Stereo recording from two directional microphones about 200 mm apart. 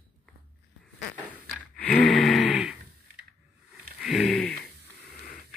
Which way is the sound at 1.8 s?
5° left (ahead or behind).